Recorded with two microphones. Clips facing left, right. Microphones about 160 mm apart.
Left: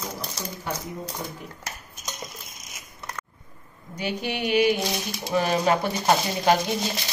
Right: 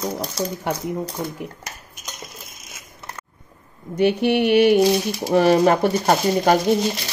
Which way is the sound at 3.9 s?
60° right (ahead or behind).